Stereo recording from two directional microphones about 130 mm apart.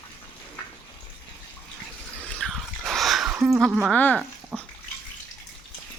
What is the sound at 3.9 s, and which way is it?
Speech, 15° left (ahead or behind).